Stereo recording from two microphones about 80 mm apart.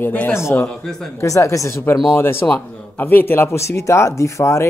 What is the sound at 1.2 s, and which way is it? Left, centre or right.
Speech, left.